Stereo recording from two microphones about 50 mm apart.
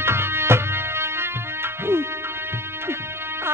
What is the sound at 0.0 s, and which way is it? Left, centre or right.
Music, right.